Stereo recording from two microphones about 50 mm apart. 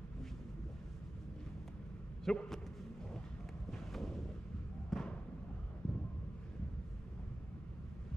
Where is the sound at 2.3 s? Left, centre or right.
Centre.